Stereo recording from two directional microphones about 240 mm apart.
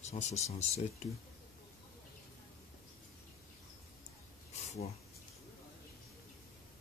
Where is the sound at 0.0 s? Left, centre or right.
Left.